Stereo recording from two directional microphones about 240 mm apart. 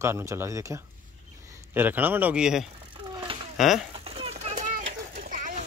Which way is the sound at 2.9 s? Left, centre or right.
Centre.